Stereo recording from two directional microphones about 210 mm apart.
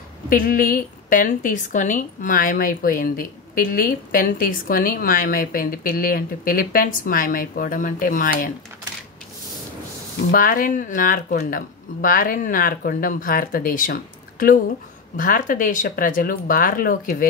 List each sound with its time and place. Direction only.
0.3 s a woman's voice: 45° left (ahead or behind)
10.3 s a woman's voice: 40° left (ahead or behind)
15.1 s a woman's voice: 40° left (ahead or behind)